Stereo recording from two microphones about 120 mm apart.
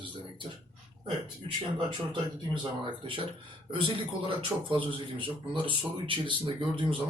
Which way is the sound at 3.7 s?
45° right (ahead or behind).